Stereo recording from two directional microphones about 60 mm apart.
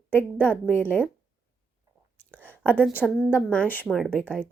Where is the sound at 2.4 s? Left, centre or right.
Left.